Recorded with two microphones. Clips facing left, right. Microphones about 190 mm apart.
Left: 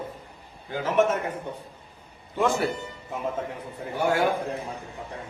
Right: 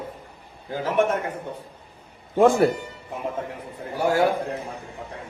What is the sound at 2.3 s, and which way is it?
Speech, 50° right (ahead or behind).